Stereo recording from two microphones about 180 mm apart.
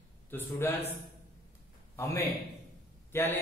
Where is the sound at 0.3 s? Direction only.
10° left (ahead or behind).